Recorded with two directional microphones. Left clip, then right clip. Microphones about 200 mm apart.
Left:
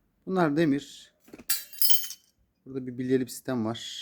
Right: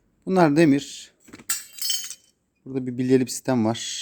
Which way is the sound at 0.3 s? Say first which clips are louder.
Right 7 dB; 35° right (ahead or behind).